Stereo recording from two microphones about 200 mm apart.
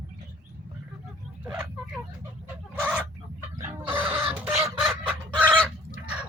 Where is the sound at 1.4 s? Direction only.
10° right (ahead or behind).